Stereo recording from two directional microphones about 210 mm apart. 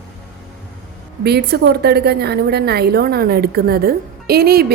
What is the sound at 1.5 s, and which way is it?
A woman's voice, 50° right (ahead or behind).